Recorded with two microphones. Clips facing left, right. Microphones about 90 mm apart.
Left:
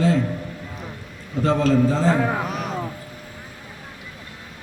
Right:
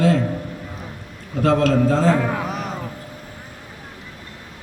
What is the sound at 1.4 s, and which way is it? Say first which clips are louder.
Speech: right 2 dB; 80° right.